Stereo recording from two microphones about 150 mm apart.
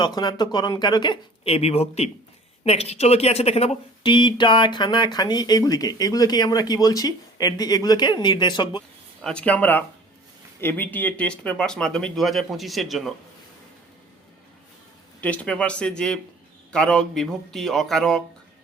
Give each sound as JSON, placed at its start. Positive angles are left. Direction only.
{"t": 0.0, "sound": "speech", "side_deg": 30}
{"t": 9.2, "sound": "speech", "side_deg": 5}
{"t": 15.2, "sound": "speech", "side_deg": 10}